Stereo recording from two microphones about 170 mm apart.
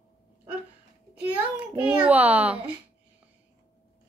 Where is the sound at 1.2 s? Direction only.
10° right (ahead or behind).